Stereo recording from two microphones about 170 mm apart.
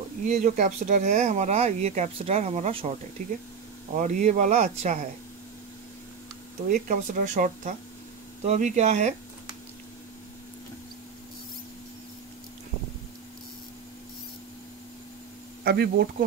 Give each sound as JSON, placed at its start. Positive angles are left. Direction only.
{"t": 0.2, "sound": "speech", "side_deg": -50}
{"t": 6.7, "sound": "speech", "side_deg": -50}
{"t": 15.6, "sound": "speech", "side_deg": -70}